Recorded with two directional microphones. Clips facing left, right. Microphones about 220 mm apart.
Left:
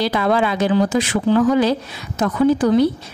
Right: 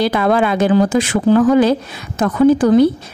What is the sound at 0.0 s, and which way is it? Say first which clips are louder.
A woman's voice: right 3 dB; 55° right (ahead or behind).